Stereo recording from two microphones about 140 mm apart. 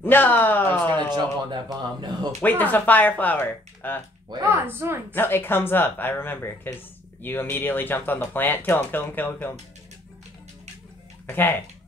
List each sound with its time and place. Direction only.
0.0 s speech: 15° left (ahead or behind)
1.1 s speech: 30° right (ahead or behind)
2.6 s speech: 10° left (ahead or behind)
4.4 s a woman's voice: 15° right (ahead or behind)
5.1 s speech: 15° left (ahead or behind)
11.2 s speech: 15° left (ahead or behind)